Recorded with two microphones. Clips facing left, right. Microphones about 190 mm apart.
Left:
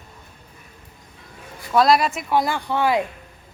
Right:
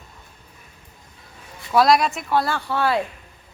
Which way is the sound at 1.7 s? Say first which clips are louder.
Even; centre (ahead or behind).